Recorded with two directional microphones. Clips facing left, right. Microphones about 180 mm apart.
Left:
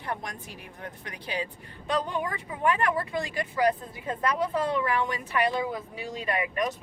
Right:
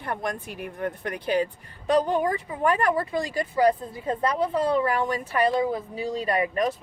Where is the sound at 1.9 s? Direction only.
40° right (ahead or behind).